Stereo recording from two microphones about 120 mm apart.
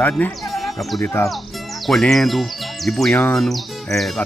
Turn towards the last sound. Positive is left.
turn(degrees=0)  # may be behind; listen again after turning